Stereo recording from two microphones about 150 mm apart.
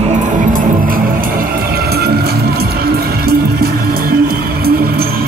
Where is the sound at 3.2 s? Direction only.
90° right.